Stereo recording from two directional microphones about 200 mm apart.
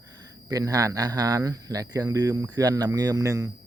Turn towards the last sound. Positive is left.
turn(degrees=-15)  # may be behind; listen again after turning